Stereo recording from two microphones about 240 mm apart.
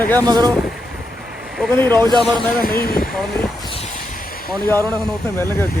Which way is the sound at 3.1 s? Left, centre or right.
Centre.